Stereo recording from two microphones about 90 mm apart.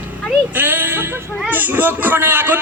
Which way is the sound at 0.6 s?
20° right (ahead or behind).